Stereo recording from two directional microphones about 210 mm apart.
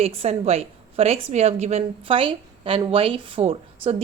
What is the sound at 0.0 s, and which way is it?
A woman's voice, 30° right (ahead or behind).